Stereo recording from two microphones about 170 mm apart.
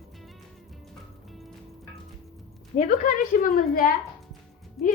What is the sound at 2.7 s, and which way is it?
A woman's voice, 55° left (ahead or behind).